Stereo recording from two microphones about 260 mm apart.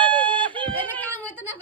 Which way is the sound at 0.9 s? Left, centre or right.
Centre.